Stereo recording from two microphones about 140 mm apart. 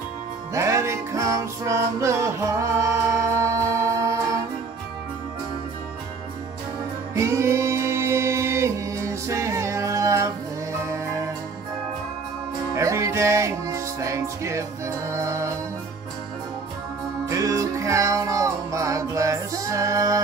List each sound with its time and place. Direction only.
0.6 s music: 20° right (ahead or behind)
7.2 s music: 20° right (ahead or behind)
12.7 s music: 20° right (ahead or behind)
17.3 s music: 25° right (ahead or behind)